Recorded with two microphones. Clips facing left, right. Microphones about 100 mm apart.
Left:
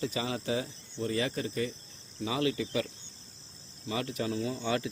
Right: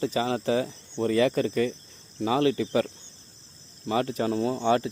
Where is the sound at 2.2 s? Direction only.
45° right (ahead or behind).